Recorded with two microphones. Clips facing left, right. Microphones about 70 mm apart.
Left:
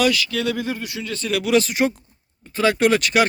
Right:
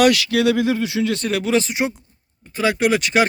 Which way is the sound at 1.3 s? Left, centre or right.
Right.